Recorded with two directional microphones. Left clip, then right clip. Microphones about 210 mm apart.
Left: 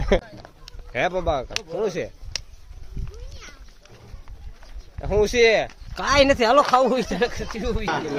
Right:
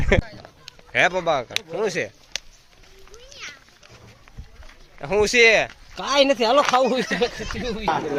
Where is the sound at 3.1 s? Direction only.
45° left (ahead or behind).